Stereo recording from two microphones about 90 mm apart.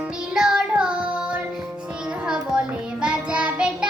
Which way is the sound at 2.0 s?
10° right (ahead or behind).